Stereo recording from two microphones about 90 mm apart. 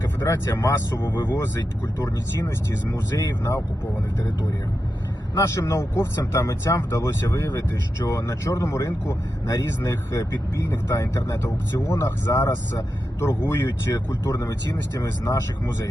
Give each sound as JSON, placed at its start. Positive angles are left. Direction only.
{"t": 0.3, "sound": "speech", "side_deg": 30}
{"t": 1.0, "sound": "speech", "side_deg": 25}
{"t": 5.6, "sound": "speech", "side_deg": 30}
{"t": 13.9, "sound": "speech", "side_deg": 40}